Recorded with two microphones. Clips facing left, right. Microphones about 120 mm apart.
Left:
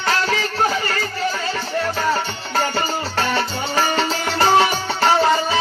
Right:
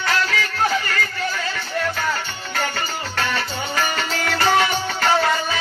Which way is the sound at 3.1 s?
30° left (ahead or behind).